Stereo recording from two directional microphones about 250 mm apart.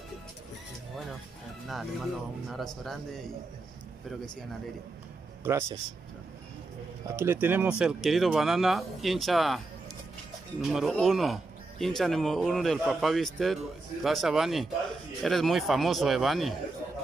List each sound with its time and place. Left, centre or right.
1.7 s speech: centre
5.4 s speech: centre
7.1 s speech: centre
10.6 s speech: centre